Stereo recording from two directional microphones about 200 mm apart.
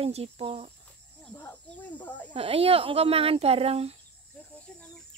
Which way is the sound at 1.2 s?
10° left (ahead or behind).